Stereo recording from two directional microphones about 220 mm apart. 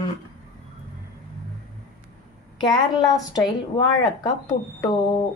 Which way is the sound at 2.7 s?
20° left (ahead or behind).